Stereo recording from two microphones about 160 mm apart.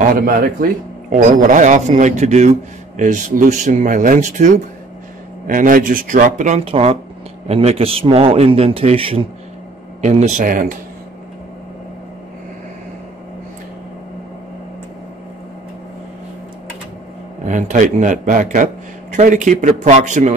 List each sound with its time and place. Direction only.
1.1 s speech: 55° right (ahead or behind)
5.5 s a man's voice: 60° right (ahead or behind); by 9.3 s 35° right (ahead or behind)
10.0 s a man's voice: 50° right (ahead or behind)
17.5 s speech: 50° right (ahead or behind)